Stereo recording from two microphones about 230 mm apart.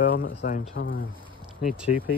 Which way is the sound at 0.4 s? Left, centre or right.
Left.